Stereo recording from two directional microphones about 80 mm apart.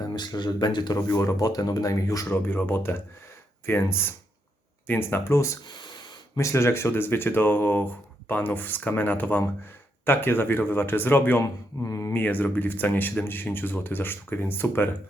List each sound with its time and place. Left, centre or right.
0.2 s speech: left
1.0 s speech: left
2.3 s speech: left
5.6 s a sound: left
6.3 s speech: left
11.9 s speech: left
12.1 s speech: left